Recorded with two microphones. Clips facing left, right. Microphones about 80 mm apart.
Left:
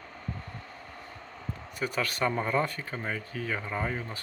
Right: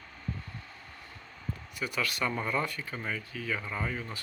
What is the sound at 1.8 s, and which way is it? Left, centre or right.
Speech, left.